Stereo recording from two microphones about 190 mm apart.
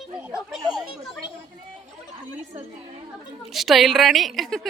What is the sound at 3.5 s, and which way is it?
A woman's voice, centre (ahead or behind).